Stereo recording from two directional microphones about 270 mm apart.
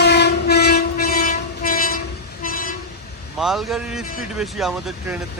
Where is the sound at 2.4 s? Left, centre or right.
Left.